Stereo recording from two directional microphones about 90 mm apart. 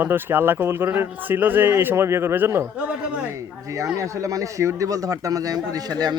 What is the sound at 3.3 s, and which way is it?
A man's voice, 35° right (ahead or behind).